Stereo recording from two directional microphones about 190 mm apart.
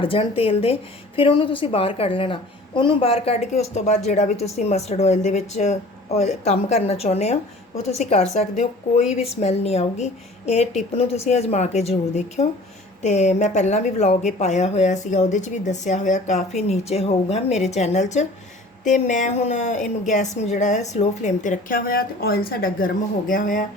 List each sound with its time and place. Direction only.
0.0 s a woman's voice: 30° left (ahead or behind); by 23.6 s 45° left (ahead or behind)